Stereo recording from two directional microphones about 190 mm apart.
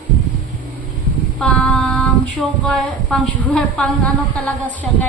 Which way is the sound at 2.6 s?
5° left (ahead or behind).